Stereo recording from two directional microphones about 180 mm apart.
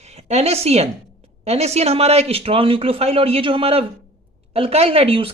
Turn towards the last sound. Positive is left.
turn(degrees=-30)  # may be behind; listen again after turning